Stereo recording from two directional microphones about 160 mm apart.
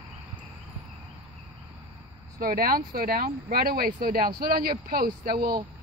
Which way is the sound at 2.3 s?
65° right (ahead or behind).